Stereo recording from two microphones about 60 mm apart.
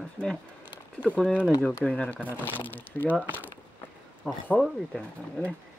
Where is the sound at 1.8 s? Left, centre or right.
Left.